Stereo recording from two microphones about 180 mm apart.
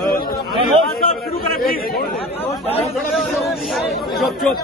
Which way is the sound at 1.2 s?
55° left (ahead or behind).